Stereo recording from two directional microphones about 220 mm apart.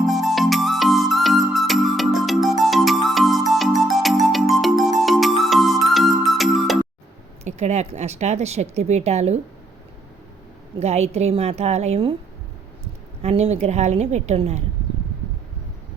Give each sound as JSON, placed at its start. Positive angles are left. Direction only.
{"t": 0.0, "sound": "music", "side_deg": 0}
{"t": 7.4, "sound": "speech", "side_deg": -30}
{"t": 10.8, "sound": "a woman's voice", "side_deg": -30}